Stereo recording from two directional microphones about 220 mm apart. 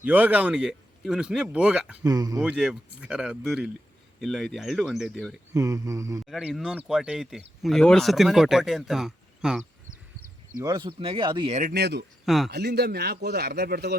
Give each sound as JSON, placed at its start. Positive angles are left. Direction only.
{"t": 0.0, "sound": "speech", "side_deg": -5}
{"t": 2.0, "sound": "a sound", "side_deg": -15}
{"t": 2.4, "sound": "speech", "side_deg": -5}
{"t": 5.5, "sound": "a sound", "side_deg": -15}
{"t": 6.2, "sound": "speech", "side_deg": 0}
{"t": 10.6, "sound": "speech", "side_deg": -20}
{"t": 11.6, "sound": "a man's voice", "side_deg": -45}
{"t": 12.2, "sound": "speech", "side_deg": 0}
{"t": 12.5, "sound": "a man's voice", "side_deg": -50}